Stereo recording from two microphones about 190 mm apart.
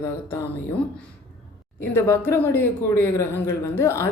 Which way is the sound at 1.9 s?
15° left (ahead or behind).